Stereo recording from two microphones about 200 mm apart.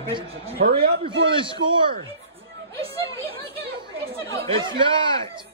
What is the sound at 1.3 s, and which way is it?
Speech, 25° right (ahead or behind).